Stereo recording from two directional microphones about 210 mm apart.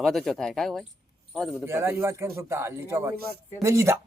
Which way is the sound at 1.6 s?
10° right (ahead or behind).